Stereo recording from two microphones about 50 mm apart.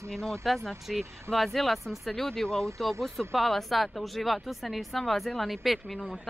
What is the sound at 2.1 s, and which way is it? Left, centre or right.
Speech, centre.